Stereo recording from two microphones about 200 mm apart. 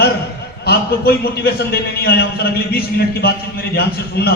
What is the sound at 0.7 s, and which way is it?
A man's voice, 50° left (ahead or behind).